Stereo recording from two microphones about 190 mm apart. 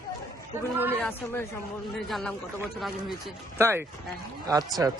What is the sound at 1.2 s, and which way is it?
Speech, 10° left (ahead or behind).